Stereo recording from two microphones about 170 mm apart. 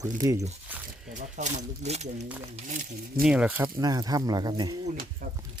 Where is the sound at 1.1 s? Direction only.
45° right (ahead or behind).